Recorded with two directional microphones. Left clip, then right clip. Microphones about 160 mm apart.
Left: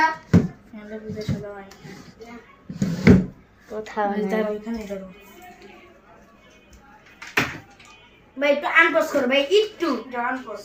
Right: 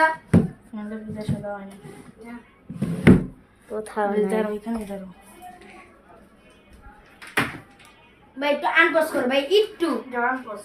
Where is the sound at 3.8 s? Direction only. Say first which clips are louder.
Right 1 dB; 20° right (ahead or behind).